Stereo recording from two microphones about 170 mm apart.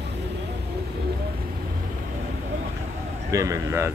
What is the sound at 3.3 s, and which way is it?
Speech, 20° right (ahead or behind).